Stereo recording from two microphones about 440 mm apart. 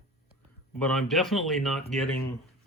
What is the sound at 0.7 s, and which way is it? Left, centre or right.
Speech, centre.